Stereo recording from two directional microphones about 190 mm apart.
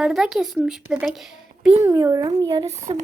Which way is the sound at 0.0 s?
Centre (ahead or behind).